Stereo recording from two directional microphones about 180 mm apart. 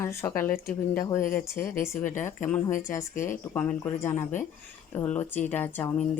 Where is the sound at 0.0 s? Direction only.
15° left (ahead or behind).